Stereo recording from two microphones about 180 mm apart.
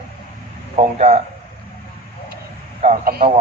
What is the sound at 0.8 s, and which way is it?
Speech, 35° right (ahead or behind).